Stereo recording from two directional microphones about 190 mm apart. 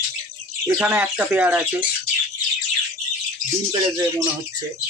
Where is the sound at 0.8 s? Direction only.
10° right (ahead or behind).